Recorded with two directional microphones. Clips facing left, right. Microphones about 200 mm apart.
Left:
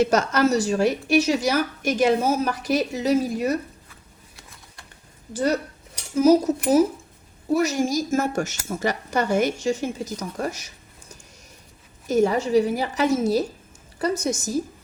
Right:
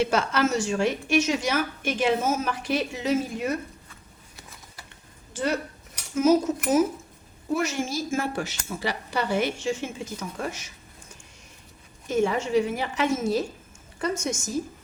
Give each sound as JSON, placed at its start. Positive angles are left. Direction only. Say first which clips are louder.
{"t": 0.0, "sound": "a woman's voice", "louder": "left 4 dB", "side_deg": 40}
{"t": 4.4, "sound": "a sound", "louder": "right 2 dB", "side_deg": 0}
{"t": 5.3, "sound": "a woman's voice", "louder": "left 4 dB", "side_deg": 40}
{"t": 12.0, "sound": "a woman's voice", "louder": "left 4 dB", "side_deg": 40}